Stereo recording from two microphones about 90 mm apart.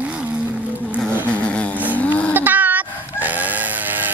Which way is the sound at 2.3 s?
20° right (ahead or behind).